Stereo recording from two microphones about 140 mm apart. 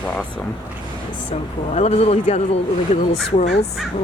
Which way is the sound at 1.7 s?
50° left (ahead or behind).